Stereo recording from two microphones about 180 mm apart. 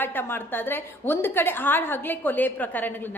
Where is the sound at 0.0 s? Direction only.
10° left (ahead or behind).